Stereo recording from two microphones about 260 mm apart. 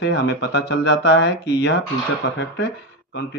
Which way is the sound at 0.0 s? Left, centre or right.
Left.